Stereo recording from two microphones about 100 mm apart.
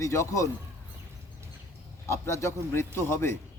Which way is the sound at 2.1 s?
30° left (ahead or behind).